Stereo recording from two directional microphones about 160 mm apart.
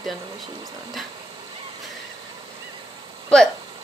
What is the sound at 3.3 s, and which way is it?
Speech, 5° left (ahead or behind).